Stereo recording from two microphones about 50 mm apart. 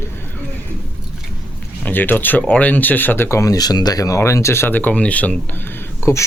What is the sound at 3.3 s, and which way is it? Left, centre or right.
Speech, left.